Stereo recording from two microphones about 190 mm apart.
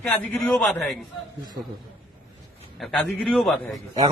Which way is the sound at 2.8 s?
Centre (ahead or behind).